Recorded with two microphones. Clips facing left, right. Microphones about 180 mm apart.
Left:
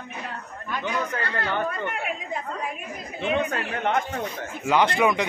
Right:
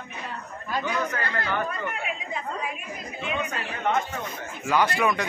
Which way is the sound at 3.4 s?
60° left (ahead or behind).